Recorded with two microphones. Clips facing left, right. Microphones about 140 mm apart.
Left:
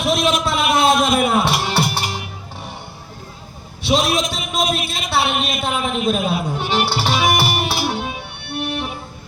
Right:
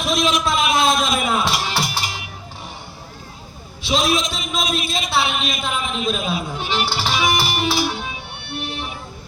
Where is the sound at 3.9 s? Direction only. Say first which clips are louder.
Left 2 dB; 60° left (ahead or behind).